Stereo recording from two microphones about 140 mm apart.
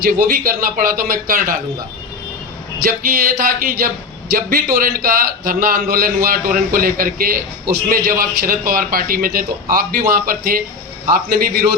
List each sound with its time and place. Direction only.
0.0 s a man's voice: 90° right
2.8 s a man's voice: 90° right